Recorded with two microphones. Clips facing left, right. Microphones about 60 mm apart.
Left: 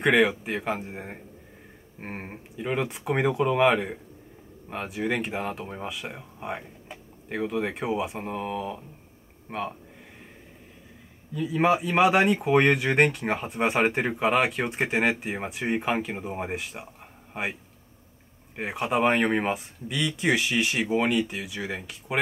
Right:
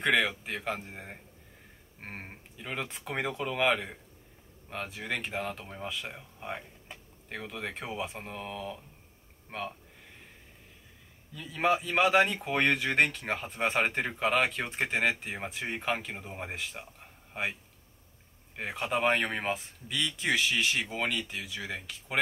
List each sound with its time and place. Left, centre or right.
0.0 s speech: centre
11.3 s a man's voice: centre
18.6 s speech: centre